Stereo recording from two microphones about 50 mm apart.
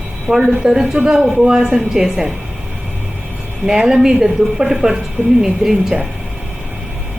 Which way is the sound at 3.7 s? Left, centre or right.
Centre.